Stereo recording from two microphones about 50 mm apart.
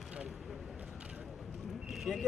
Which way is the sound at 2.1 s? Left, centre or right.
Centre.